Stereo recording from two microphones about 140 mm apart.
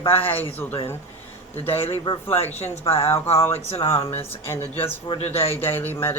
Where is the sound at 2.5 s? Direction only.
50° left (ahead or behind).